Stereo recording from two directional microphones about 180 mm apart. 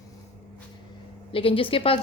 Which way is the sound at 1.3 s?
30° left (ahead or behind).